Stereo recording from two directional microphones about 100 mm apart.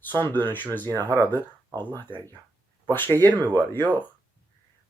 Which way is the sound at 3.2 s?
20° left (ahead or behind).